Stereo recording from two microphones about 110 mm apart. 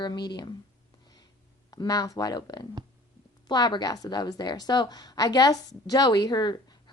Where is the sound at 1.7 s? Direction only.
35° left (ahead or behind).